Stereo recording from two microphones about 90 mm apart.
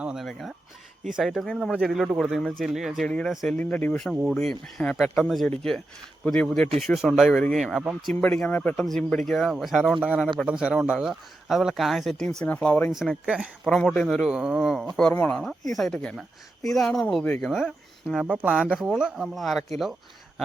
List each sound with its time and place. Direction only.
0.0 s speech: 5° right (ahead or behind)
3.1 s speech: 10° left (ahead or behind)
4.4 s speech: 5° left (ahead or behind)
8.2 s speech: 15° left (ahead or behind)
12.5 s speech: 20° left (ahead or behind)
12.9 s speech: 5° right (ahead or behind)
13.7 s speech: 5° left (ahead or behind)
14.3 s speech: 10° right (ahead or behind)
15.1 s speech: 25° left (ahead or behind)
15.4 s speech: 5° left (ahead or behind)